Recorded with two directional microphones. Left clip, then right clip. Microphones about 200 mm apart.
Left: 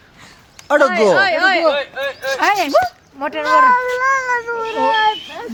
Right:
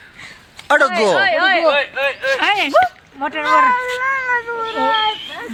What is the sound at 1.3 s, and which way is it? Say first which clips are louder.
Speech: even; 55° left (ahead or behind).